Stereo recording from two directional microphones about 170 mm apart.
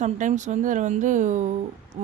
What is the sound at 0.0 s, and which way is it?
Speech, 45° right (ahead or behind).